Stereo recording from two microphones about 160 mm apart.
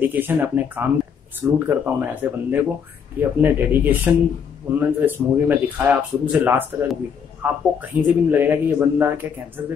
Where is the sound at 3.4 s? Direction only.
10° right (ahead or behind).